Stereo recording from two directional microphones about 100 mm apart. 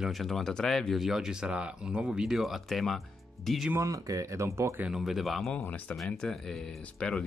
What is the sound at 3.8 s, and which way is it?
Speech, 35° right (ahead or behind).